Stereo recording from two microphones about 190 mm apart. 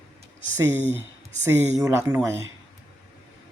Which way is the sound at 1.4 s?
10° right (ahead or behind).